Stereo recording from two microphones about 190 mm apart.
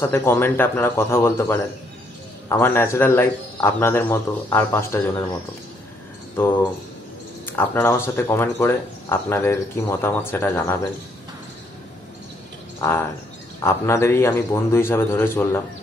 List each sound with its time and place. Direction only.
0.0 s speech: 10° left (ahead or behind)
7.4 s speech: 10° left (ahead or behind)
12.8 s speech: 10° left (ahead or behind)